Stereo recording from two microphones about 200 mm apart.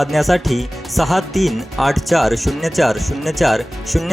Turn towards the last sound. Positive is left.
turn(degrees=0)  # may be behind; listen again after turning